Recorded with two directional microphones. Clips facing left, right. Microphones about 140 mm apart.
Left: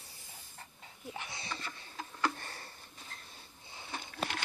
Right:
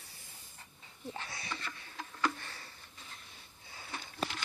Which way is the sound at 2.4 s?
45° left (ahead or behind).